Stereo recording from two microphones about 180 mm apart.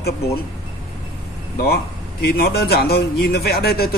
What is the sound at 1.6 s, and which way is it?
A man's voice, 60° left (ahead or behind).